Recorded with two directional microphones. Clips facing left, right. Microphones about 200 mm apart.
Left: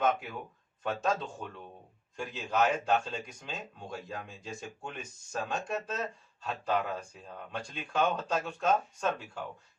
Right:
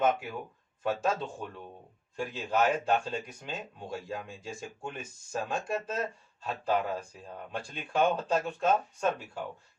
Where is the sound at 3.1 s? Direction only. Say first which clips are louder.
Right 3 dB; 5° right (ahead or behind).